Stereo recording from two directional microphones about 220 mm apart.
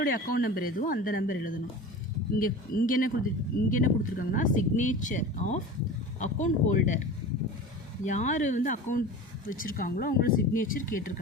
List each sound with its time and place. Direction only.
0.0 s speech: 40° left (ahead or behind)
8.0 s speech: 35° left (ahead or behind)